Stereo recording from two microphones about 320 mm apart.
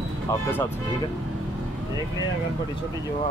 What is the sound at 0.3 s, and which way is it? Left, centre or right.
Speech, centre.